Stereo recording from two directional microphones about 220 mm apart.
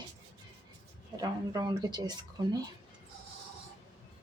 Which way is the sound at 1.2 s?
15° right (ahead or behind).